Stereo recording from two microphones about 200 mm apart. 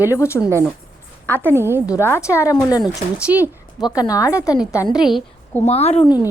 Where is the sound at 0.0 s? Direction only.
15° left (ahead or behind).